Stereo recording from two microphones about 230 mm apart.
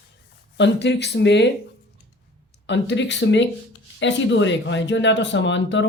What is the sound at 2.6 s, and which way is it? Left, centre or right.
Speech, left.